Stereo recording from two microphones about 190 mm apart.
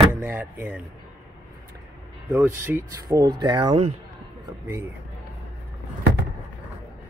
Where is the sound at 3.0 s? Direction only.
20° right (ahead or behind).